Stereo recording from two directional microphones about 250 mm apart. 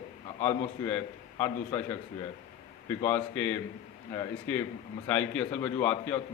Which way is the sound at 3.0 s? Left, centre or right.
Centre.